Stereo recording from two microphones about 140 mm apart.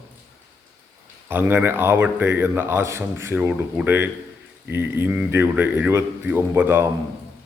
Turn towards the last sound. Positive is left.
turn(degrees=-15)  # may be behind; listen again after turning